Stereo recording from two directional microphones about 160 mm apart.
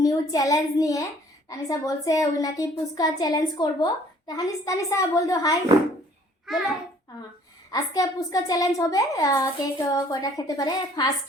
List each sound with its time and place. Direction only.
0.0 s a woman's voice: 25° left (ahead or behind)
6.5 s a child's voice: centre (ahead or behind)
7.7 s a woman's voice: 25° left (ahead or behind)